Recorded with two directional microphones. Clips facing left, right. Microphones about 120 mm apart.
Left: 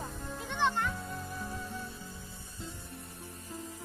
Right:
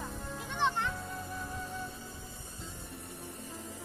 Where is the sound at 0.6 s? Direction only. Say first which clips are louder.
Left 1 dB; 15° right (ahead or behind).